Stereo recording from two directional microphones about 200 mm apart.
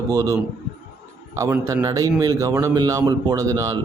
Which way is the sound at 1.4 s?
15° right (ahead or behind).